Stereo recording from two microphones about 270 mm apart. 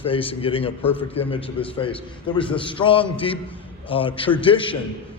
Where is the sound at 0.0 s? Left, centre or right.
Centre.